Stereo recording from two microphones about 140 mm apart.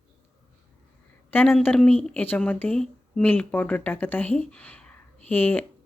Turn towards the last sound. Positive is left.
turn(degrees=15)  # may be behind; listen again after turning